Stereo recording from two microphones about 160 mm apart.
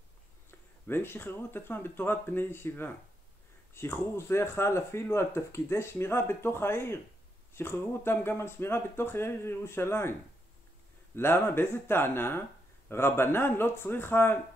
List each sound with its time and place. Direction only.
0.5 s speech: 15° left (ahead or behind)
11.1 s speech: 15° left (ahead or behind)